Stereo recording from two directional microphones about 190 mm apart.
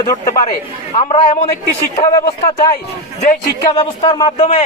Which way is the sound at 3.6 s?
20° left (ahead or behind).